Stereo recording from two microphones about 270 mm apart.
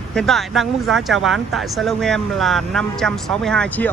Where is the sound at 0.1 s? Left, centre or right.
Centre.